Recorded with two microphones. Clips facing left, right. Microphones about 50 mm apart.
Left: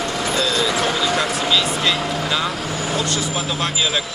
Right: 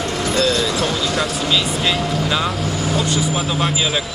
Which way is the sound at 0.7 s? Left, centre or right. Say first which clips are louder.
Even; left.